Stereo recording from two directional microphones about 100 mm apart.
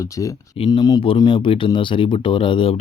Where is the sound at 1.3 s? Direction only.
60° left (ahead or behind).